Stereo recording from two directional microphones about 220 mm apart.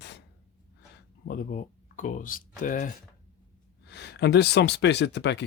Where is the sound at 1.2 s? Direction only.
40° left (ahead or behind).